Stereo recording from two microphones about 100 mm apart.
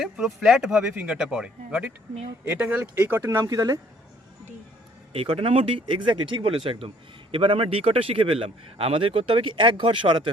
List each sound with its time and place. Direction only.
0.0 s a man's voice: centre (ahead or behind); by 3.4 s 25° right (ahead or behind)
3.4 s speech: 35° right (ahead or behind)
5.1 s speech: 70° right (ahead or behind)
5.8 s a man's voice: 55° right (ahead or behind)